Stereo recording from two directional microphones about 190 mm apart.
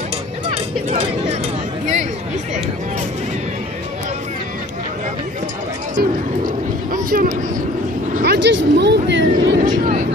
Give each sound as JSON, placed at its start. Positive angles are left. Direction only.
{"t": 0.5, "sound": "music", "side_deg": -35}
{"t": 6.9, "sound": "a sound", "side_deg": -45}
{"t": 8.2, "sound": "vehicle", "side_deg": -60}
{"t": 9.6, "sound": "vehicle", "side_deg": -40}